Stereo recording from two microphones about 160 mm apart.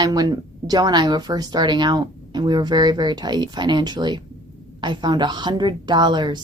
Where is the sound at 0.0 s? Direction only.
25° right (ahead or behind).